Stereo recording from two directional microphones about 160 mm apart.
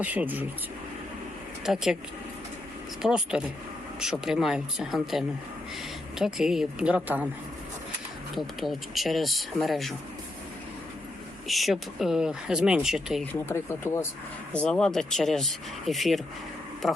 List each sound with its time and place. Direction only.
0.0 s speech: 10° right (ahead or behind)
1.6 s speech: centre (ahead or behind)
3.0 s speech: 5° right (ahead or behind)
8.4 s speech: centre (ahead or behind)
11.4 s speech: centre (ahead or behind)
13.4 s speech: 15° left (ahead or behind)
14.5 s speech: 5° left (ahead or behind)